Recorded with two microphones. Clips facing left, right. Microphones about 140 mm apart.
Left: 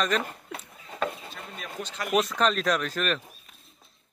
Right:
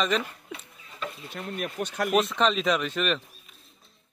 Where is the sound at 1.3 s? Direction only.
60° right (ahead or behind).